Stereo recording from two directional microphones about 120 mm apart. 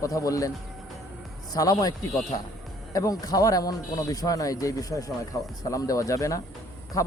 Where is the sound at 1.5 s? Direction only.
30° left (ahead or behind).